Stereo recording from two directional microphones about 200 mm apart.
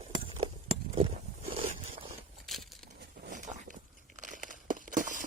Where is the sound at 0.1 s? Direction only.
25° right (ahead or behind).